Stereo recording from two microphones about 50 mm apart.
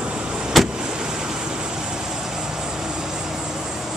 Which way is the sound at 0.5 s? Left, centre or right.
Centre.